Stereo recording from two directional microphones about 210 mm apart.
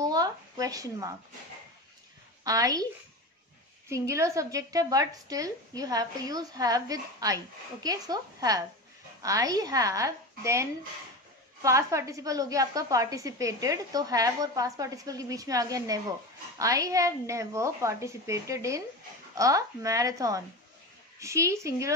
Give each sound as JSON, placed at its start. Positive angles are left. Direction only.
{"t": 0.0, "sound": "a sound", "side_deg": -20}
{"t": 2.4, "sound": "a woman's voice", "side_deg": -15}
{"t": 3.9, "sound": "a woman's voice", "side_deg": -15}